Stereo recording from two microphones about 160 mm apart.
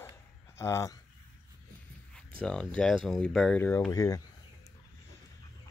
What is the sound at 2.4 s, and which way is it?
Speech, 5° left (ahead or behind).